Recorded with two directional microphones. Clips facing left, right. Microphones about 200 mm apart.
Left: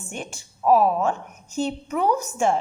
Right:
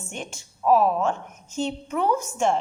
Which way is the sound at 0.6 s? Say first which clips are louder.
Left 1 dB; 5° left (ahead or behind).